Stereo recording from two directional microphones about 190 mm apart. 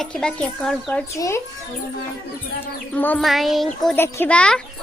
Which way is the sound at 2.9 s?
10° left (ahead or behind).